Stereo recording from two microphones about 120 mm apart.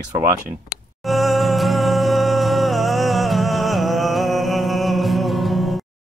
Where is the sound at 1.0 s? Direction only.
Centre (ahead or behind).